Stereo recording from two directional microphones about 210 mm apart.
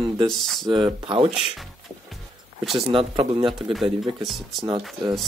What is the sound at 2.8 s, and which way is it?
Speech, 25° right (ahead or behind).